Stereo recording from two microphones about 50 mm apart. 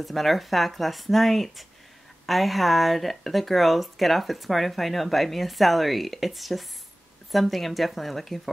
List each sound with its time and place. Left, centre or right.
0.0 s speech: centre